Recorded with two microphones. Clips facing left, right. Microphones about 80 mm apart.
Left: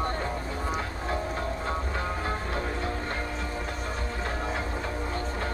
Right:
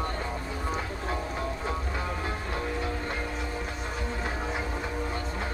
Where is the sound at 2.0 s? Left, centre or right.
Left.